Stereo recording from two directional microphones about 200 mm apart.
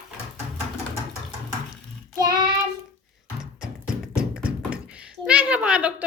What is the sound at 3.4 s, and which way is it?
Speech, 5° right (ahead or behind).